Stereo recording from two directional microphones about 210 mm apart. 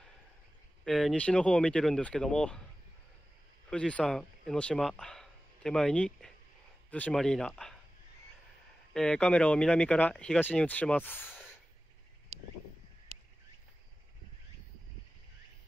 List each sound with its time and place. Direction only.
0.8 s speech: centre (ahead or behind)
3.7 s speech: 5° left (ahead or behind)
8.9 s speech: 5° left (ahead or behind)
11.2 s sigh: 5° right (ahead or behind)